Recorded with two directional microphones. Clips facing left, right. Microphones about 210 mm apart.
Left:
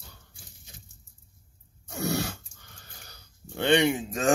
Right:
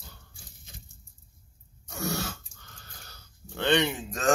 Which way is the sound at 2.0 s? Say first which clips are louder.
Left 3 dB; 15° left (ahead or behind).